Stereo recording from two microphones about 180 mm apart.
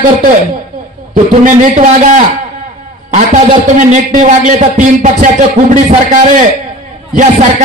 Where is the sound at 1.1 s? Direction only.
45° right (ahead or behind).